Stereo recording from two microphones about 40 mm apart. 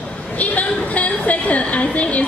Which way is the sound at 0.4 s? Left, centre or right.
Left.